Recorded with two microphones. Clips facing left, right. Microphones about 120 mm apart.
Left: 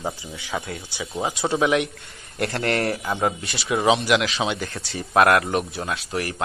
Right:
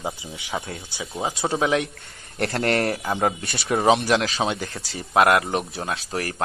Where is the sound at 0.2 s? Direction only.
25° right (ahead or behind); by 4.1 s 45° right (ahead or behind).